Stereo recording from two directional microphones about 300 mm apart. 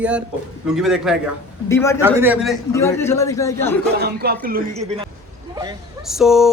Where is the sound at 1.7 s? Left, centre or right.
Centre.